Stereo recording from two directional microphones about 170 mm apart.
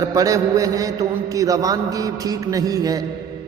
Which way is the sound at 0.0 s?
20° right (ahead or behind).